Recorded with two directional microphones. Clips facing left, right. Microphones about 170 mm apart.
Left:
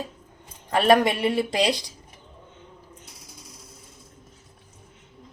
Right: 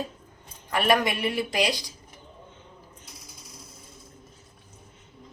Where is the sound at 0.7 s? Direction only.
30° left (ahead or behind).